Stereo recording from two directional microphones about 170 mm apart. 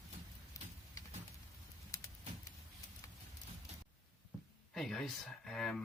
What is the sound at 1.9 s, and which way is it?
Vehicle, 20° left (ahead or behind).